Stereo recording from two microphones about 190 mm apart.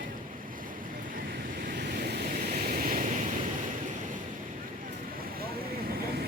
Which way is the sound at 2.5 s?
50° right (ahead or behind).